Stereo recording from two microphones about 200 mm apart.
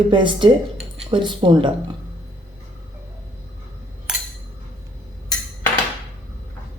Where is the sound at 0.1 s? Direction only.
25° right (ahead or behind).